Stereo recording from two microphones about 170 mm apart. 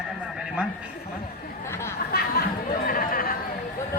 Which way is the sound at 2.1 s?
65° left (ahead or behind).